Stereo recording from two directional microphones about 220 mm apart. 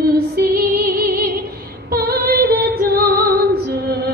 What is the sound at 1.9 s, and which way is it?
Female singing, 40° right (ahead or behind).